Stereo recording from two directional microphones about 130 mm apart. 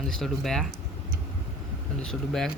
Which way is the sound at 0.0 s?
Centre (ahead or behind).